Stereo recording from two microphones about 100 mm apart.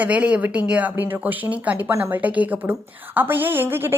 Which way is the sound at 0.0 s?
15° right (ahead or behind).